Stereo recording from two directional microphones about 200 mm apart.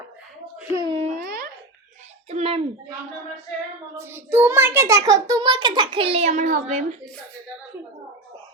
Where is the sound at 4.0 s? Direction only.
10° right (ahead or behind); by 7.0 s 35° right (ahead or behind).